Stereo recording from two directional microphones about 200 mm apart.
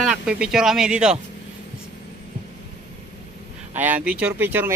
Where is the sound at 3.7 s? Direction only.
10° right (ahead or behind).